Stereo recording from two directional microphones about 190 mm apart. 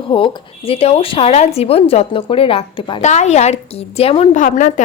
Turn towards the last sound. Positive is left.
turn(degrees=40)  # may be behind; listen again after turning